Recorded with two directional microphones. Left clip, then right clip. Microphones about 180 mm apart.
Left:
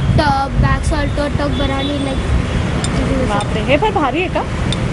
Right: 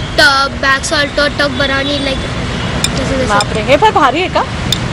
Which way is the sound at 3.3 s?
25° right (ahead or behind).